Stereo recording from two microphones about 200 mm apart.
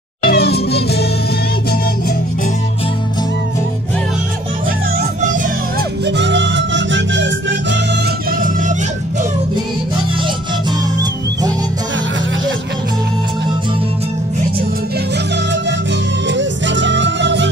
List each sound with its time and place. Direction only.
0.2 s music: 50° left (ahead or behind)
5.2 s music: 40° right (ahead or behind)
6.0 s music: 60° right (ahead or behind); by 8.7 s 45° right (ahead or behind)
16.3 s music: 65° right (ahead or behind)